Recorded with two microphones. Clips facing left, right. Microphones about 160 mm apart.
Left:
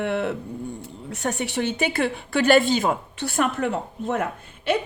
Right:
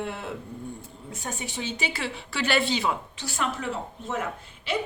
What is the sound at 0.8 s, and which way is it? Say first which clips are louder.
Speech: left 8 dB; 70° left (ahead or behind).